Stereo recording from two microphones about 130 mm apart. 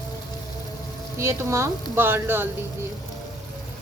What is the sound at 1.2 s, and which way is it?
A woman's voice, 20° right (ahead or behind).